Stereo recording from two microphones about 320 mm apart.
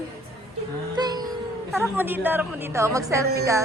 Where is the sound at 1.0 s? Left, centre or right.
Centre.